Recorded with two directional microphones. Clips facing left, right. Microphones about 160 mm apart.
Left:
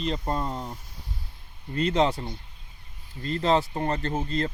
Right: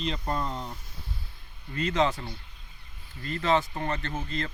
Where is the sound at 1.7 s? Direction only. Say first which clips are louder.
Left 3 dB; 30° left (ahead or behind).